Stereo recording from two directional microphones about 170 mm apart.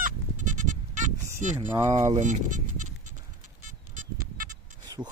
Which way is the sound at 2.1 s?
45° right (ahead or behind).